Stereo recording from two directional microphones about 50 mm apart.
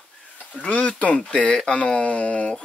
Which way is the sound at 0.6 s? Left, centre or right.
Left.